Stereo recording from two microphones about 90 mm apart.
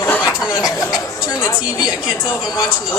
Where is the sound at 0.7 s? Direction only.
40° left (ahead or behind).